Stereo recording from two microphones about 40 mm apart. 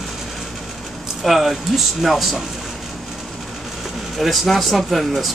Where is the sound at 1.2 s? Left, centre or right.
Centre.